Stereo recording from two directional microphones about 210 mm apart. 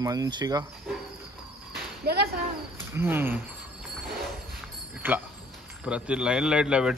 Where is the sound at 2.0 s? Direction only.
50° right (ahead or behind).